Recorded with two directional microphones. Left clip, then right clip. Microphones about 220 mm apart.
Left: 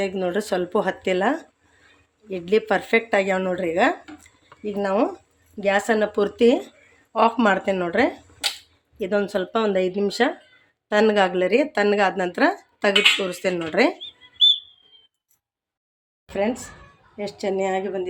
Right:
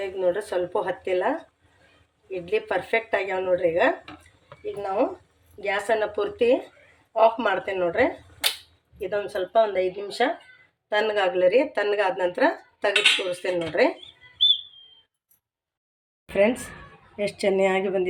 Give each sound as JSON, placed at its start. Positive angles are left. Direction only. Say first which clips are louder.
{"t": 0.0, "sound": "speech", "louder": "left 1 dB", "side_deg": 50}
{"t": 16.3, "sound": "speech", "louder": "right 3 dB", "side_deg": 0}